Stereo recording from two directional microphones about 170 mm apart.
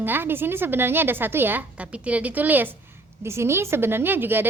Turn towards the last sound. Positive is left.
turn(degrees=-10)  # may be behind; listen again after turning